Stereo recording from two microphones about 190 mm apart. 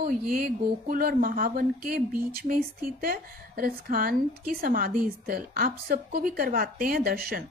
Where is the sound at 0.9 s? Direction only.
50° right (ahead or behind).